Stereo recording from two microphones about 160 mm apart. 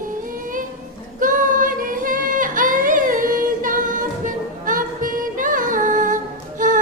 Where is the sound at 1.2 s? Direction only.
55° right (ahead or behind).